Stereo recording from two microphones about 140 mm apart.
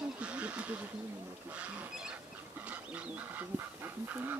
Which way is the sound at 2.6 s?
10° right (ahead or behind).